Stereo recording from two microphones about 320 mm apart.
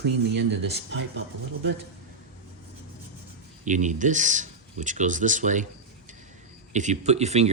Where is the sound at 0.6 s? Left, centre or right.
Right.